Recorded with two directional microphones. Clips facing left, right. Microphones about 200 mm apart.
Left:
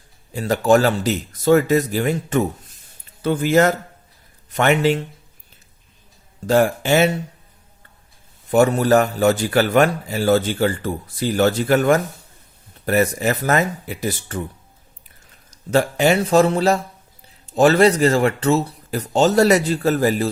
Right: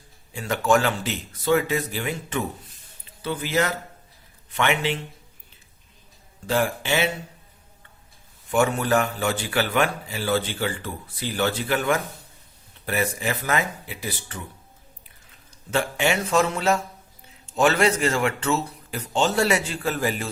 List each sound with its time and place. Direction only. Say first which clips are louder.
0.3 s a man's voice: left 6 dB; 35° left (ahead or behind)
6.5 s a man's voice: left 7 dB; 45° left (ahead or behind)
8.4 s a man's voice: left 7 dB; 40° left (ahead or behind)
15.4 s speech: left 7 dB; 40° left (ahead or behind)